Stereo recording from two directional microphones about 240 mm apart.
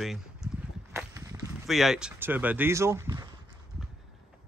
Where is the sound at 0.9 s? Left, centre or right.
Centre.